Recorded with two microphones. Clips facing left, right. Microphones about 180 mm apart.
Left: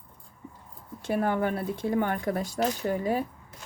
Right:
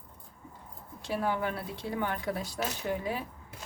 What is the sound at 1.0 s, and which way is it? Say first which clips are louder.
Speech: left 5 dB; 55° left (ahead or behind).